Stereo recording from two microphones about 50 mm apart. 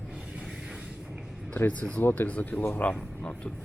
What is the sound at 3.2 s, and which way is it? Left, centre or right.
Speech, centre.